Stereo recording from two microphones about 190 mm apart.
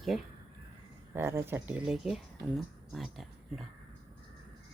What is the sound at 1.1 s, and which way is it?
Speech, 15° right (ahead or behind).